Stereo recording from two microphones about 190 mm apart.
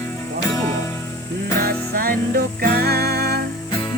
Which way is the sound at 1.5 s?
50° right (ahead or behind).